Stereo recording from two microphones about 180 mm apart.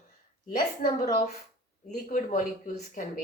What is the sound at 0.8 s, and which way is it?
Speech, 50° left (ahead or behind).